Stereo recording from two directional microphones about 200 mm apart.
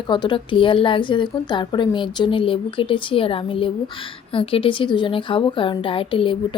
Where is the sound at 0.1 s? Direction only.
25° left (ahead or behind).